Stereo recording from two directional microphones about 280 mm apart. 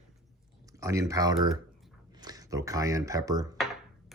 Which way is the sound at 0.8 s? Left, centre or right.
Centre.